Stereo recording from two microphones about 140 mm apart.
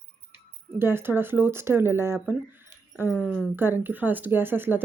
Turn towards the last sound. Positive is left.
turn(degrees=-15)  # may be behind; listen again after turning